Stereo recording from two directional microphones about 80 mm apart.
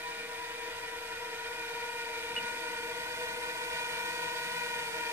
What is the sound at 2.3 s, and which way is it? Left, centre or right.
Vehicle, right.